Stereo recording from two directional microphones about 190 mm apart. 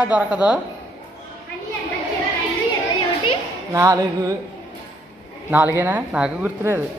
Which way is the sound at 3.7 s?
15° right (ahead or behind).